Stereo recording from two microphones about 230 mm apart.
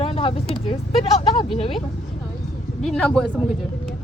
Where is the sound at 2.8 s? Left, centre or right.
Centre.